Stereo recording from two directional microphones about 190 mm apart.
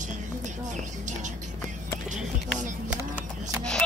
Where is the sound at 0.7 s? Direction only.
40° right (ahead or behind).